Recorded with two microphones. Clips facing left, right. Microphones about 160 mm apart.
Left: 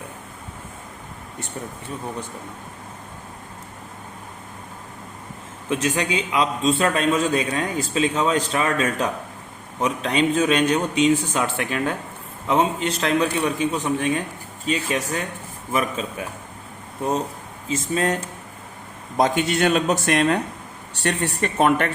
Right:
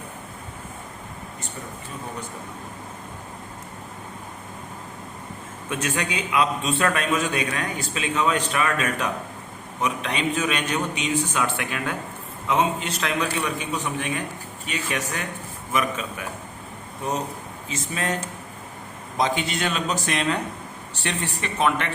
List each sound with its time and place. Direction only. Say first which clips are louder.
5.6 s a man's voice: left 4 dB; 30° left (ahead or behind)
19.1 s speech: left 5 dB; 50° left (ahead or behind)